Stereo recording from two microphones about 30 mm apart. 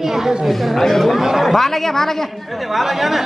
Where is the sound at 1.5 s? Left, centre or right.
Centre.